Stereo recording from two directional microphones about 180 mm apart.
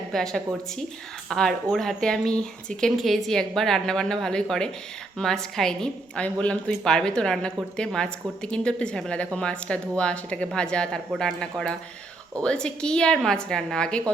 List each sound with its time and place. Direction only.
0.1 s a woman's voice: 5° left (ahead or behind)